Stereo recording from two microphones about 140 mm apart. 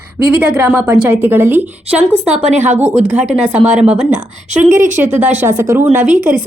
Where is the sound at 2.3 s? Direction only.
55° right (ahead or behind).